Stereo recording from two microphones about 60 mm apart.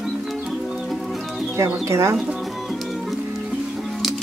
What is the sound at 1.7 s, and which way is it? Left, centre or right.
Speech, right.